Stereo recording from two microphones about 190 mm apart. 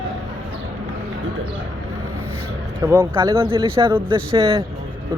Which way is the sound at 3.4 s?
30° right (ahead or behind).